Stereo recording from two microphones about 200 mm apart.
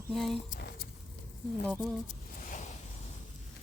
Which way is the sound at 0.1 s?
Centre (ahead or behind).